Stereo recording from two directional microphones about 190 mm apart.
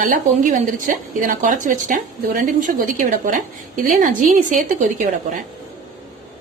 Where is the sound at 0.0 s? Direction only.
45° right (ahead or behind).